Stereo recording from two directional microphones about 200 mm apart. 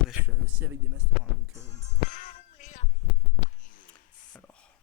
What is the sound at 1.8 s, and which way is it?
Music, 40° left (ahead or behind).